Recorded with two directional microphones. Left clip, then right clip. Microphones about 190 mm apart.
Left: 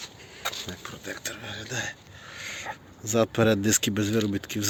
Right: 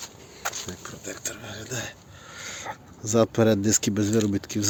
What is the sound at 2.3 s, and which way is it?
Speech, 25° right (ahead or behind).